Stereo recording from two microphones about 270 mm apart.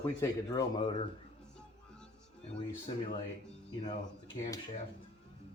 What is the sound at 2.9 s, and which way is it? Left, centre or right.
Speech, left.